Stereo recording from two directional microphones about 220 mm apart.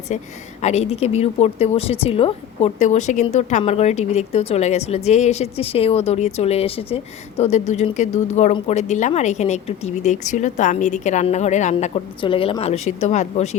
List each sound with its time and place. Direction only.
0.1 s a woman's voice: 35° left (ahead or behind)